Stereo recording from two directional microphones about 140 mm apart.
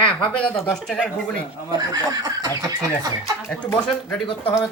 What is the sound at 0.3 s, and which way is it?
Speech, 5° left (ahead or behind).